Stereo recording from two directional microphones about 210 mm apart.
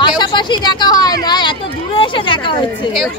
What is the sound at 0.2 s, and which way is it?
Speech, 20° left (ahead or behind).